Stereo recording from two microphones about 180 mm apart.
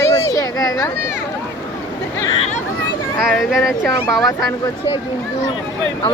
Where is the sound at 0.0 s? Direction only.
20° left (ahead or behind).